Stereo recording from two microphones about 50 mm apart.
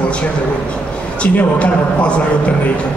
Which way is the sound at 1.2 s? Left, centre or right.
Left.